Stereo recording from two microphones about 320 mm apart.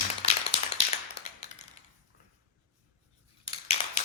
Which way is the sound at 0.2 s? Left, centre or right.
Centre.